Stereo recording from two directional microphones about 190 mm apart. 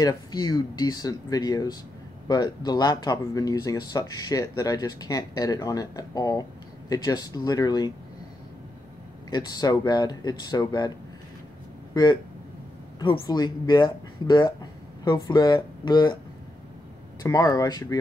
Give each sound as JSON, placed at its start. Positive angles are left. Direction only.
{"t": 0.0, "sound": "speech", "side_deg": 20}
{"t": 9.3, "sound": "speech", "side_deg": 20}
{"t": 11.9, "sound": "speech", "side_deg": 20}
{"t": 17.2, "sound": "speech", "side_deg": 20}